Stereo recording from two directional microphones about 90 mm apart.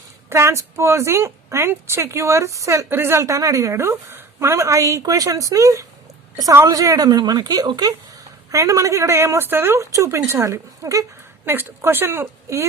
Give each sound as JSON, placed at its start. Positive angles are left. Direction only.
{"t": 0.3, "sound": "a woman's voice", "side_deg": -30}